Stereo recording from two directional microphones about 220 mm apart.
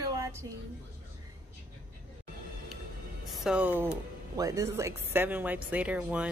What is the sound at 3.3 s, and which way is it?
A woman's voice, centre (ahead or behind).